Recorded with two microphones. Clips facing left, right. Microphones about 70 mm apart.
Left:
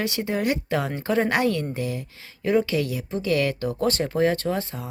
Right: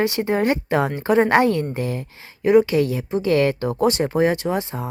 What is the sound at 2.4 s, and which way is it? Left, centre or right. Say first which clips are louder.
Speech: right 7 dB; right.